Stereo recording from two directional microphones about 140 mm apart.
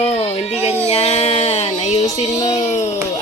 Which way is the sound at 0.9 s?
50° left (ahead or behind).